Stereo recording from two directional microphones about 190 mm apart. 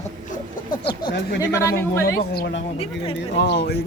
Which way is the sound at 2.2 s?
55° left (ahead or behind).